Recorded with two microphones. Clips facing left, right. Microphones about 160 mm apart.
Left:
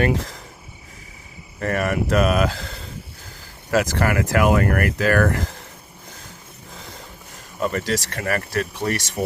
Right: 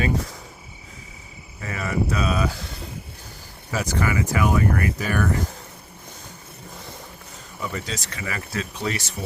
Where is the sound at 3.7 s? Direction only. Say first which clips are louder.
Left 5 dB; 80° left.